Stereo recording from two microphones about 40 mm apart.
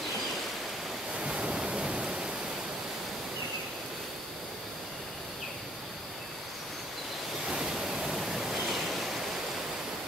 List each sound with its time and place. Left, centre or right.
1.2 s waves: right
7.4 s waves: centre